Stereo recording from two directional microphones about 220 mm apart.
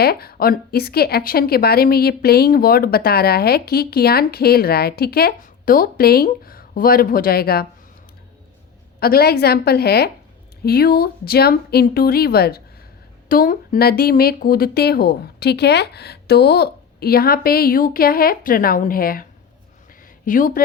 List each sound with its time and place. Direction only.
0.0 s a woman's voice: 45° left (ahead or behind)
9.0 s a woman's voice: 45° left (ahead or behind)
20.2 s speech: 35° left (ahead or behind)